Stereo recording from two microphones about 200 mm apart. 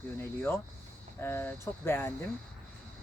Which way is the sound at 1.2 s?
10° left (ahead or behind).